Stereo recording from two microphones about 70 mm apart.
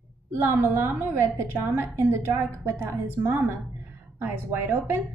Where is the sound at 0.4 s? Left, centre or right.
Right.